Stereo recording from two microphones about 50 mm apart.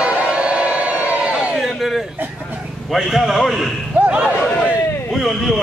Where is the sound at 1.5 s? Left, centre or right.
Centre.